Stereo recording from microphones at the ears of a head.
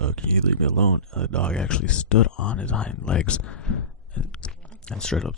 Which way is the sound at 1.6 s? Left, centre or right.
Left.